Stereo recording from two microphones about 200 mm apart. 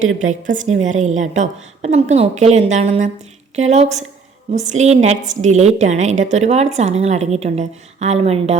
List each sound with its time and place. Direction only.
0.2 s a woman's voice: 40° right (ahead or behind)